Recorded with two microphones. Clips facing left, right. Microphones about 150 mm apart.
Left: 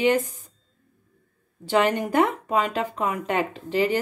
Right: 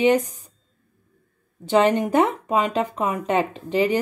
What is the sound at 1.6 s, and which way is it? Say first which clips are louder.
A woman's voice: right 4 dB; 20° right (ahead or behind).